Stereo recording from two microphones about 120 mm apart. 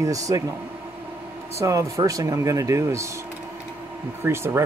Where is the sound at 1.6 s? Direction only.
25° right (ahead or behind).